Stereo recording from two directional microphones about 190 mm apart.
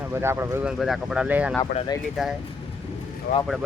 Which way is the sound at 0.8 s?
Centre (ahead or behind).